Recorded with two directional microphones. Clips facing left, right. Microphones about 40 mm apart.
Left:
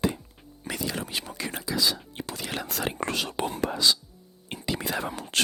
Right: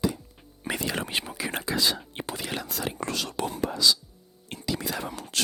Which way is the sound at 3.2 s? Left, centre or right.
Left.